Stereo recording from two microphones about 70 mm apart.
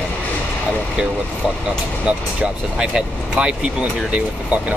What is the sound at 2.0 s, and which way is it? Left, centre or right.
Speech, centre.